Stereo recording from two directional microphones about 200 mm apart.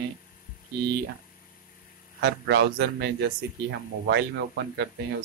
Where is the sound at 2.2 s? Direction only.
60° right (ahead or behind).